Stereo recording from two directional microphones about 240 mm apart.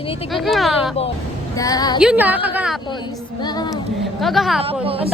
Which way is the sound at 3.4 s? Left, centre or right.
Centre.